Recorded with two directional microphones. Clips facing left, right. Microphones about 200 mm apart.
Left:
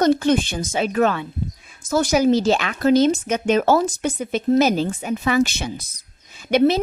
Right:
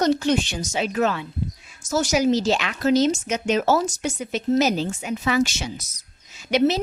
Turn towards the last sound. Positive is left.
turn(degrees=55)  # may be behind; listen again after turning